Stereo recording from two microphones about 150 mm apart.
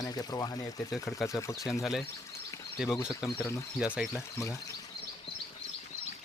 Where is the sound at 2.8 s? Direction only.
25° left (ahead or behind).